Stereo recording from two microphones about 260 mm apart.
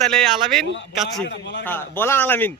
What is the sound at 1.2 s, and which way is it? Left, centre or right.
Speech, left.